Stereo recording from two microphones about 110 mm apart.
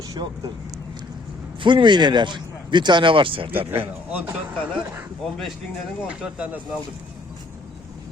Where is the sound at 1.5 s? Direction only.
45° right (ahead or behind).